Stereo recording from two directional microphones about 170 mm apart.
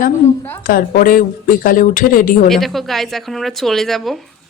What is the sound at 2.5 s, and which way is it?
A woman's voice, centre (ahead or behind).